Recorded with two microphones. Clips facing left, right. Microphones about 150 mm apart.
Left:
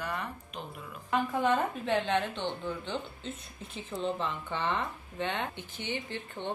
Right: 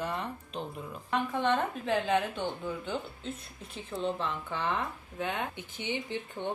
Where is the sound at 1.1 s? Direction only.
Centre (ahead or behind).